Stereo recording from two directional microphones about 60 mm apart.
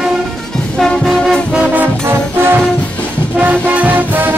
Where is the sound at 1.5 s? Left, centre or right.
Right.